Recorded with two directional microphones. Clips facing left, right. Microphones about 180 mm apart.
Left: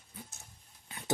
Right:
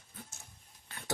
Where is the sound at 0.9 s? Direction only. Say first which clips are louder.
Left 3 dB; 15° left (ahead or behind).